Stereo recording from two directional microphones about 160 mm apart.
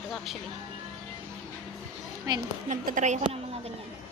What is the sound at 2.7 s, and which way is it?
Speech, 50° right (ahead or behind).